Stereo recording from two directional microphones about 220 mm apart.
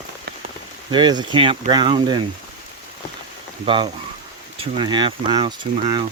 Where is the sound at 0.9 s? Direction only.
20° right (ahead or behind).